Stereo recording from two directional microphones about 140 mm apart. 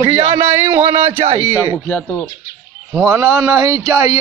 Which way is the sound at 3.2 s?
25° right (ahead or behind).